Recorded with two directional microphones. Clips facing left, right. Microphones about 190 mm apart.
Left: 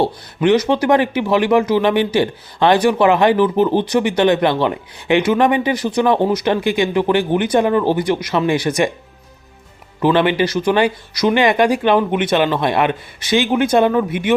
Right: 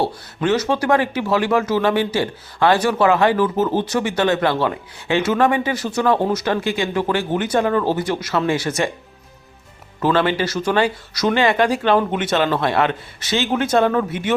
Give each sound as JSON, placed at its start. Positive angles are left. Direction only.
{"t": 0.4, "sound": "speech", "side_deg": 15}
{"t": 10.0, "sound": "speech", "side_deg": 15}